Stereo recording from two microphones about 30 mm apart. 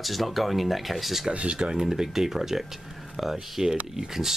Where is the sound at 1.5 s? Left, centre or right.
Right.